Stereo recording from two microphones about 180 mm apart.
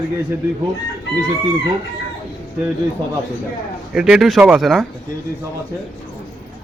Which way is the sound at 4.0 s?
5° right (ahead or behind).